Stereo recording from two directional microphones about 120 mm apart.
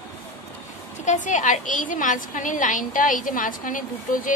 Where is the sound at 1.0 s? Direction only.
90° left.